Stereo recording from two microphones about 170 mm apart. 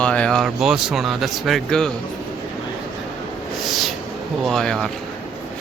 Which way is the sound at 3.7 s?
Centre (ahead or behind).